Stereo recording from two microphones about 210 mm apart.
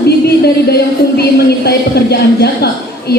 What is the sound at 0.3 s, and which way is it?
Speech, 50° left (ahead or behind).